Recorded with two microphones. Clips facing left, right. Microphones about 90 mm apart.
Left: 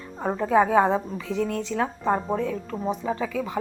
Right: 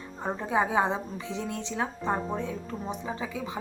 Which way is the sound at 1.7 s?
55° left (ahead or behind).